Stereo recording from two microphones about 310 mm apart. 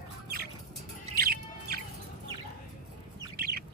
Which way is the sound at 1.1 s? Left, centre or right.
Right.